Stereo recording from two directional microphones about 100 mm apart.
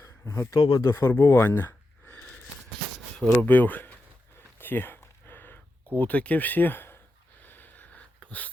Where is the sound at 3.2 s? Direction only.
15° left (ahead or behind).